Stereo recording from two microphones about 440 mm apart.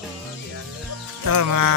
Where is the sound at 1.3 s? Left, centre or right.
Right.